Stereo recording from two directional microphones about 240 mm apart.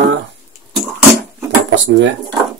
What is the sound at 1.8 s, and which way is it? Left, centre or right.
Speech, right.